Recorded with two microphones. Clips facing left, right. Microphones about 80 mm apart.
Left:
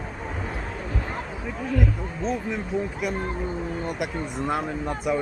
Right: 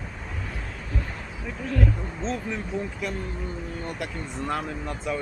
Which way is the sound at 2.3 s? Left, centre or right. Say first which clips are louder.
Left 3 dB; centre.